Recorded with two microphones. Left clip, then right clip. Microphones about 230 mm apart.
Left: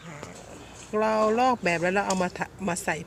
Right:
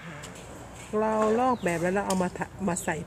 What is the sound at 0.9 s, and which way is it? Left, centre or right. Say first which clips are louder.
Speech: left 2 dB; centre.